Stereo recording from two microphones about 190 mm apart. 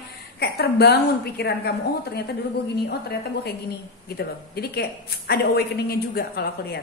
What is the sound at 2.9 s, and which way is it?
A woman's voice, 60° left (ahead or behind).